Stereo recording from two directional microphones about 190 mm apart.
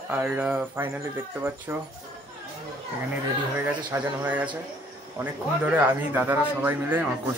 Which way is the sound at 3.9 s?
10° right (ahead or behind).